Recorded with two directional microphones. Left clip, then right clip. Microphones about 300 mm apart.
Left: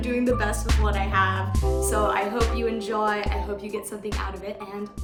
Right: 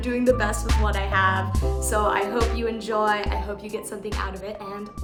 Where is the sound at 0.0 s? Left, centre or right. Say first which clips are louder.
Right 3 dB; centre.